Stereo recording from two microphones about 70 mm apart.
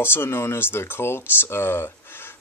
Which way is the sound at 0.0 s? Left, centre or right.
Left.